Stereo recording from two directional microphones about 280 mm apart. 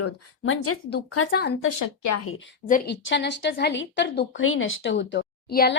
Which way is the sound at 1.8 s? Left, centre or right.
Left.